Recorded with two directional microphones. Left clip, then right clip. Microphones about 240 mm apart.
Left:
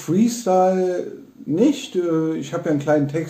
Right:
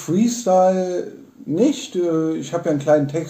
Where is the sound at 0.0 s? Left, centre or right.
Centre.